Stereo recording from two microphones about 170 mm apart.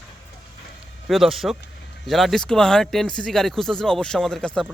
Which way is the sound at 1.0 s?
Centre (ahead or behind).